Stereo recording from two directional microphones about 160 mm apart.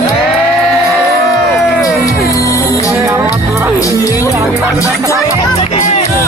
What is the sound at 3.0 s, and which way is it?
Music, 15° right (ahead or behind).